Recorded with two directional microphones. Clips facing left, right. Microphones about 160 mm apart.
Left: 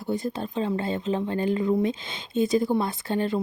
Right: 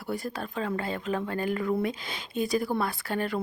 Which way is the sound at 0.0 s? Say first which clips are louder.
Left 5 dB; 20° left (ahead or behind).